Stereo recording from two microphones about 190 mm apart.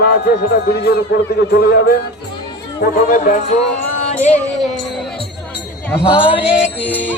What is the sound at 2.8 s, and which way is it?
Speech, 50° left (ahead or behind).